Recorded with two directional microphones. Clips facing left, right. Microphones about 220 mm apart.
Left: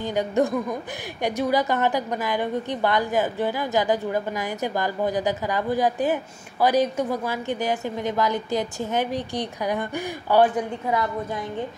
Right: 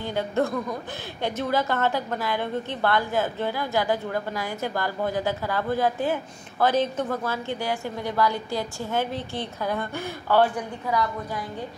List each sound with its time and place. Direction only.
0.0 s a woman's voice: 15° left (ahead or behind)